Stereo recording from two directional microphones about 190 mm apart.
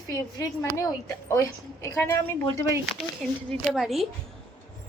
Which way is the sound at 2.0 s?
15° left (ahead or behind).